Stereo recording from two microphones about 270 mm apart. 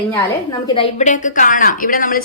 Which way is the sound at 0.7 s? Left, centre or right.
Left.